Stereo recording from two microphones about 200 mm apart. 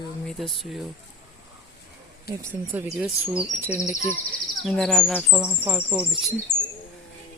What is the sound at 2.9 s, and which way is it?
Chirp, 5° right (ahead or behind).